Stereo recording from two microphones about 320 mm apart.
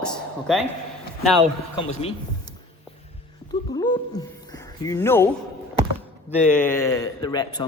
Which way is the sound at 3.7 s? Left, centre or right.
Centre.